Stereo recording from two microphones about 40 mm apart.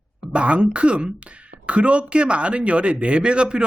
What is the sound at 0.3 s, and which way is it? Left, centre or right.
Speech, right.